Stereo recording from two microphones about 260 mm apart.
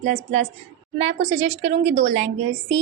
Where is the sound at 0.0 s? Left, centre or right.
Right.